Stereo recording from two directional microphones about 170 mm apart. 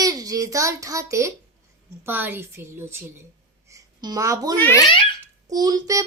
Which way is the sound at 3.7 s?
20° right (ahead or behind).